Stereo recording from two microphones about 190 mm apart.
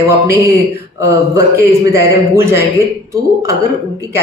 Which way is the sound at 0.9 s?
15° right (ahead or behind).